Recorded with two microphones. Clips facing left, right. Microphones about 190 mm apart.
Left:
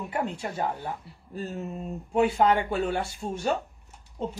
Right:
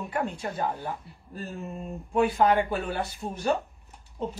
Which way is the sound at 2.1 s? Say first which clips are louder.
Even; 25° left (ahead or behind).